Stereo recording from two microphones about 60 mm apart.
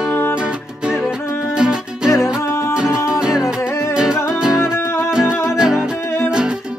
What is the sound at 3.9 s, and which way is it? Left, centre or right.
Music, centre.